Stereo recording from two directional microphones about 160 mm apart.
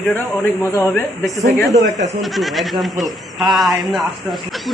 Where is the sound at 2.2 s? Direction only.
Centre (ahead or behind).